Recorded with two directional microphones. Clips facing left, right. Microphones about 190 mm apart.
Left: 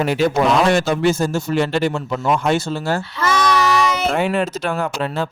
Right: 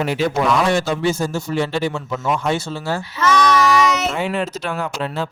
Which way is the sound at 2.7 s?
50° left (ahead or behind).